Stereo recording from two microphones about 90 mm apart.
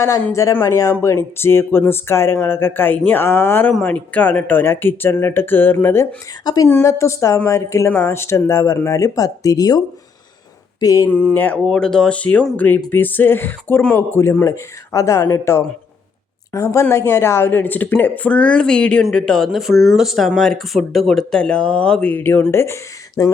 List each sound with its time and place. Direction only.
0.5 s speech: 30° left (ahead or behind)
6.4 s a woman's voice: 50° left (ahead or behind)
6.8 s speech: 35° left (ahead or behind)
11.1 s speech: 10° left (ahead or behind)
11.6 s speech: 5° left (ahead or behind)
12.5 s a woman's voice: 20° left (ahead or behind)
19.5 s speech: centre (ahead or behind); by 22.8 s 30° left (ahead or behind)
23.2 s a woman's voice: 45° left (ahead or behind)